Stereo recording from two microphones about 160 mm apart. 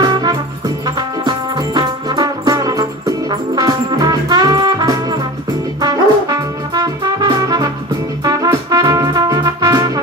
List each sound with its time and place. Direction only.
0.0 s music: 25° right (ahead or behind)